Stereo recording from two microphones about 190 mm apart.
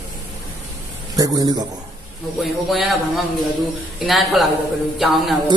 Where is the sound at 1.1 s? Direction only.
20° right (ahead or behind).